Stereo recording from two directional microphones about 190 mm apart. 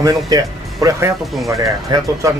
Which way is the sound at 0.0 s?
20° right (ahead or behind).